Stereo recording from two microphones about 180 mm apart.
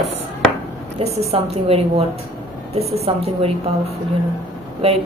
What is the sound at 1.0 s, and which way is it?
A woman's voice, 35° right (ahead or behind).